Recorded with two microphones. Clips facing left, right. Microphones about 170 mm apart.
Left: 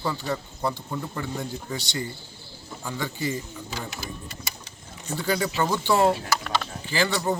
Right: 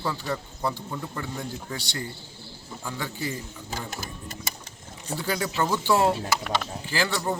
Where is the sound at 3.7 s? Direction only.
45° right (ahead or behind).